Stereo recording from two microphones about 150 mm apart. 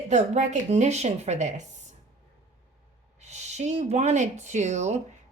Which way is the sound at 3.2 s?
50° right (ahead or behind).